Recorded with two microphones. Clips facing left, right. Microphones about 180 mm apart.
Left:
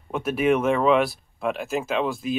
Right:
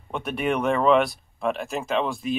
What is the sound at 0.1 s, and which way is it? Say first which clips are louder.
Speech: left 4 dB; 5° left (ahead or behind).